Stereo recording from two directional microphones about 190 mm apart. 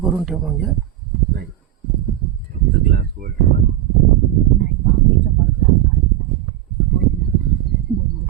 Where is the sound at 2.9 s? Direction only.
55° right (ahead or behind).